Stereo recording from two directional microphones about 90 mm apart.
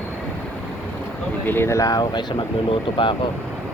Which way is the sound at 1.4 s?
25° left (ahead or behind).